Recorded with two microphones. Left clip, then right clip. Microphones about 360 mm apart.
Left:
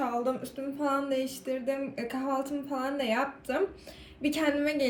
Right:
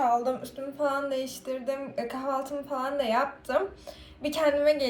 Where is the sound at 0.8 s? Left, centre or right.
Right.